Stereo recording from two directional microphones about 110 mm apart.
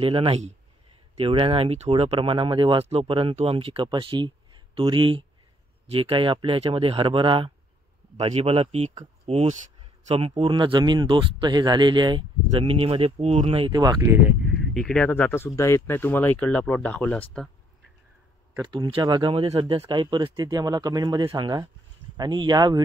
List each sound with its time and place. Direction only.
0.3 s speech: 90° right
1.1 s speech: 55° right (ahead or behind)
8.2 s speech: 75° right (ahead or behind)
10.5 s speech: 45° right (ahead or behind)
12.5 s speech: 60° right (ahead or behind)
14.0 s speech: 20° right (ahead or behind)
14.4 s a sound: centre (ahead or behind)
15.0 s speech: 20° left (ahead or behind)
18.6 s speech: 40° right (ahead or behind)